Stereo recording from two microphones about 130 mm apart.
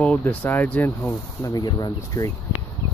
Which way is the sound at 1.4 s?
25° left (ahead or behind).